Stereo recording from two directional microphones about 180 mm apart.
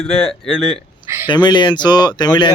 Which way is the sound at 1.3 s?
25° left (ahead or behind).